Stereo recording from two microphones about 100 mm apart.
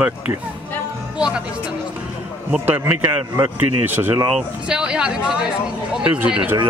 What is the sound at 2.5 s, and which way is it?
Speech, 20° right (ahead or behind).